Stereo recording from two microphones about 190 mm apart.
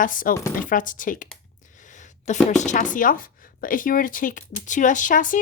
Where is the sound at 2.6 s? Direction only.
40° left (ahead or behind).